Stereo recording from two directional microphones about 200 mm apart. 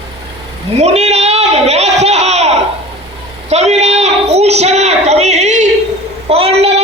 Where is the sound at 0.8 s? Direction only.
35° right (ahead or behind).